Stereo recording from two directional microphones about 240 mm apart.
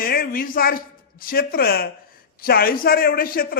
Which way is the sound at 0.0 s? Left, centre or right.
Left.